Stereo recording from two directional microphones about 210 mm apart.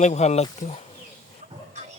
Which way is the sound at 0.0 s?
30° left (ahead or behind).